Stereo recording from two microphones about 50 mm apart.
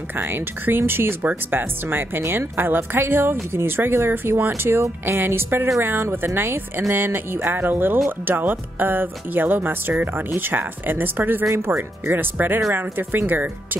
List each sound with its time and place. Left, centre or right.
0.2 s a woman's voice: right